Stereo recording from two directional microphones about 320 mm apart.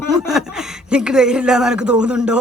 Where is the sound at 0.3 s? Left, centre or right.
Centre.